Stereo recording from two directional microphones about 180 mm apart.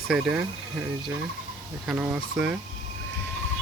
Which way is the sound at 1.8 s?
5° right (ahead or behind).